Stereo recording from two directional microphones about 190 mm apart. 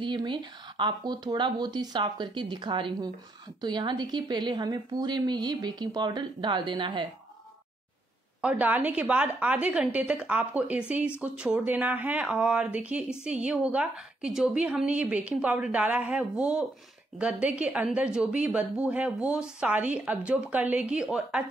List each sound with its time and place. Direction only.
0.0 s a woman's voice: 25° right (ahead or behind)
8.4 s a woman's voice: 5° right (ahead or behind)